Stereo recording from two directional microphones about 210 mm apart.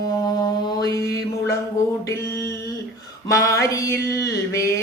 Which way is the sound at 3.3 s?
15° left (ahead or behind).